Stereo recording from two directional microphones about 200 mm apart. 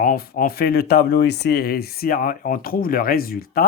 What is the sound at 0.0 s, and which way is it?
Speech, 45° left (ahead or behind).